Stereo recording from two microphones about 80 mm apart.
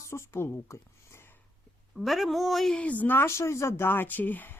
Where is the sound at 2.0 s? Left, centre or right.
Centre.